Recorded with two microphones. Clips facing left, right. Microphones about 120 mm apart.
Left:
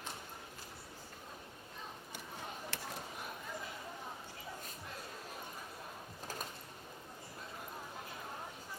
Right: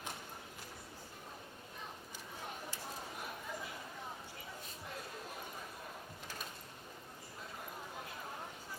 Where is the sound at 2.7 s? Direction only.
70° left (ahead or behind).